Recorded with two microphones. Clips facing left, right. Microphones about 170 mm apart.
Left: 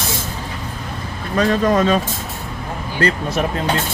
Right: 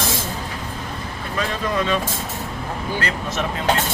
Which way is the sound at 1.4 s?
45° left (ahead or behind).